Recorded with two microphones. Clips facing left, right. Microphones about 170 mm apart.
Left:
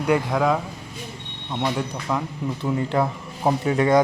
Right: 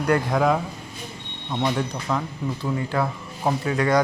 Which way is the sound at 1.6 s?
Centre (ahead or behind).